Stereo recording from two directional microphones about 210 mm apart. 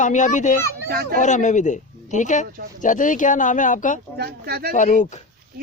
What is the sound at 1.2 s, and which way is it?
Speech, 35° left (ahead or behind).